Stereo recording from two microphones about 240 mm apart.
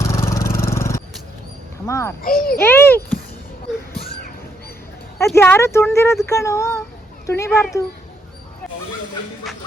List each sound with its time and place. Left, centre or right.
0.0 s vehicle: centre
0.5 s scrape: centre
1.9 s speech: centre
2.2 s a child's voice: left
2.6 s speech: centre
5.3 s speech: centre